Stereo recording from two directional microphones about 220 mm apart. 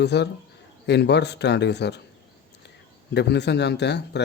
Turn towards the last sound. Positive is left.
turn(degrees=50)  # may be behind; listen again after turning